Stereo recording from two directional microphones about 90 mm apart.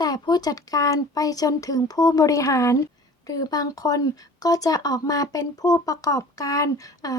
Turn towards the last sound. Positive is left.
turn(degrees=40)  # may be behind; listen again after turning